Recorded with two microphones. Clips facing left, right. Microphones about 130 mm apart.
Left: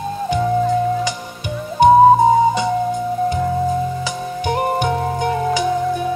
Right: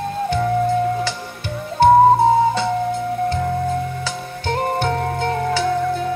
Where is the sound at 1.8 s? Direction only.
15° left (ahead or behind).